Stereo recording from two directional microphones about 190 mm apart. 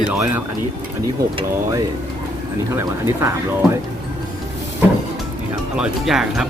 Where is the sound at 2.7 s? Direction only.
15° right (ahead or behind).